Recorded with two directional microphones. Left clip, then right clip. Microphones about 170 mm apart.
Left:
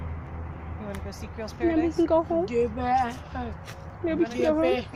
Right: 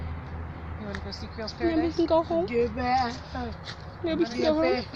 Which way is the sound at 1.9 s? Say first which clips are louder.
Even; 15° left (ahead or behind).